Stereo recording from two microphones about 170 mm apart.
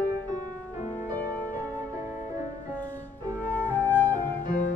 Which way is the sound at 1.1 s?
10° left (ahead or behind).